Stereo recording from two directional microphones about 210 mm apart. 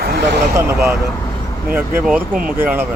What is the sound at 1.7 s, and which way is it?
A man's voice, 10° right (ahead or behind).